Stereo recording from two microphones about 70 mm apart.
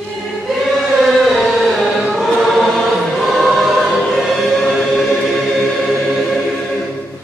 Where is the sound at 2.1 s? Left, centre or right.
Centre.